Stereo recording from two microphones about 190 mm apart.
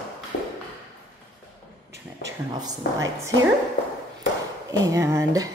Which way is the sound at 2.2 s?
20° right (ahead or behind).